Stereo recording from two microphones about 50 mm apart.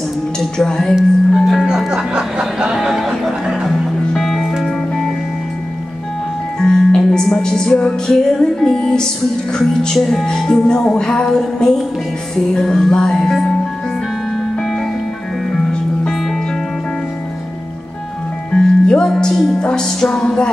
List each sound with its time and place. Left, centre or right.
0.7 s music: centre
1.3 s speech: centre
1.9 s music: centre
2.7 s music: centre
6.6 s music: centre
9.9 s speech: centre
10.2 s music: centre
16.1 s music: centre
18.5 s music: centre